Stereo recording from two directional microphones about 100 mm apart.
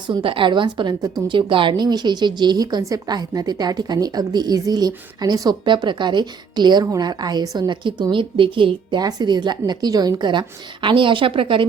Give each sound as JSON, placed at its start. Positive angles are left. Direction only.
{"t": 0.2, "sound": "a woman's voice", "side_deg": -60}
{"t": 1.3, "sound": "a woman's voice", "side_deg": -55}